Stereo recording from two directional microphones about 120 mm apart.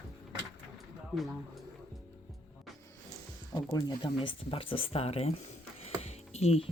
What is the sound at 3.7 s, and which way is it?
Speech, 40° left (ahead or behind).